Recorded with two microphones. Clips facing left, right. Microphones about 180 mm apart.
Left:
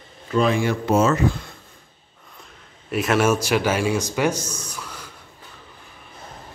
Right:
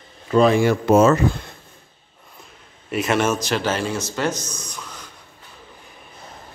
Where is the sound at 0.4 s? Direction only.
40° right (ahead or behind).